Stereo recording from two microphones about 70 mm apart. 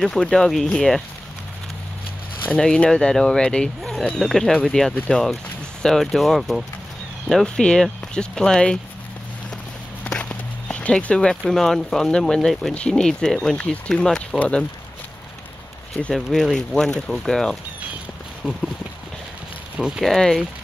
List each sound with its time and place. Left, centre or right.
0.0 s speech: centre
2.5 s speech: centre
4.5 s speech: centre
5.1 s speech: centre
7.4 s speech: centre
10.0 s speech: centre
16.0 s speech: centre
20.0 s speech: centre